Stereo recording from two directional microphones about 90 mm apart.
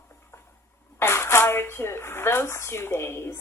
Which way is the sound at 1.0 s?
30° left (ahead or behind).